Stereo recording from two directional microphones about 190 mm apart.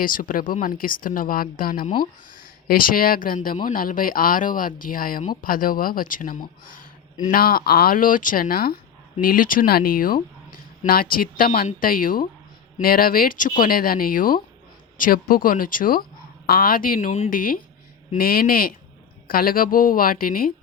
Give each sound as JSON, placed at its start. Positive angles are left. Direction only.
{"t": 0.0, "sound": "speech", "side_deg": 45}